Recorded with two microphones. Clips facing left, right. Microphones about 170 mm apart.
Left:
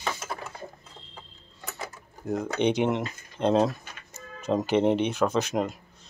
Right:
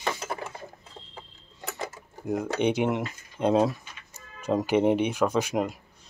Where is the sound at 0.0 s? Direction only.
15° right (ahead or behind).